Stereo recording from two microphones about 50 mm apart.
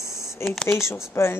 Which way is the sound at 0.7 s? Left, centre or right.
Left.